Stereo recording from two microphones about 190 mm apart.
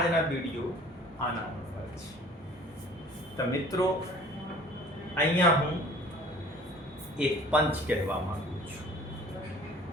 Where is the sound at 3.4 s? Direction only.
20° left (ahead or behind).